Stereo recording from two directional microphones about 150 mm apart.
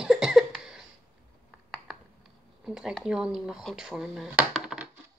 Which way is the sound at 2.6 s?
5° right (ahead or behind).